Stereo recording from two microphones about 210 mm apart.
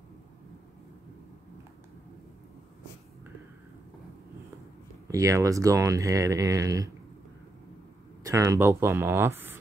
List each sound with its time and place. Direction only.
5.0 s speech: 15° right (ahead or behind)
8.2 s speech: 15° right (ahead or behind)